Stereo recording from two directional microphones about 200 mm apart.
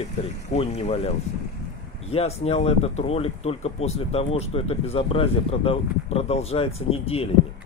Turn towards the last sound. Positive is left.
turn(degrees=30)  # may be behind; listen again after turning